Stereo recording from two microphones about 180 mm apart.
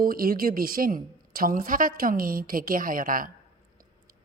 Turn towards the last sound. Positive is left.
turn(degrees=-50)  # may be behind; listen again after turning